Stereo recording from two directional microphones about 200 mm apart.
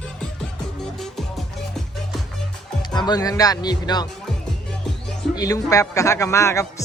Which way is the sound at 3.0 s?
20° left (ahead or behind).